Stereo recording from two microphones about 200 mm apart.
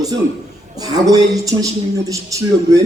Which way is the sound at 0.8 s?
20° right (ahead or behind).